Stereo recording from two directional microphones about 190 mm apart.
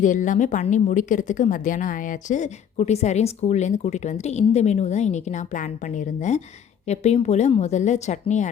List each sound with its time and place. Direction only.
0.0 s a woman's voice: 40° left (ahead or behind)
6.8 s a woman's voice: 35° left (ahead or behind)